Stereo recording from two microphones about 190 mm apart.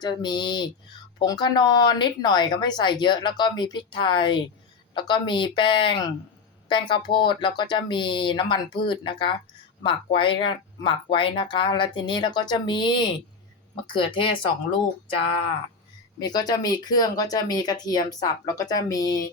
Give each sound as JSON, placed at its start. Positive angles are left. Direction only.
{"t": 0.0, "sound": "speech", "side_deg": 25}
{"t": 16.2, "sound": "speech", "side_deg": 20}